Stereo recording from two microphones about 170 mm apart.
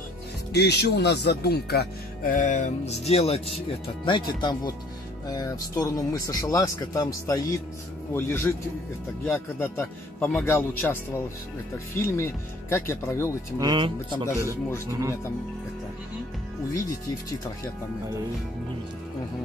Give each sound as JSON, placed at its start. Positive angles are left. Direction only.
{"t": 0.5, "sound": "speech", "side_deg": 80}
{"t": 13.6, "sound": "speech", "side_deg": -25}